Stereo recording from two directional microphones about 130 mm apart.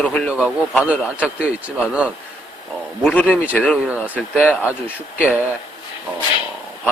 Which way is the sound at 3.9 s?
10° right (ahead or behind).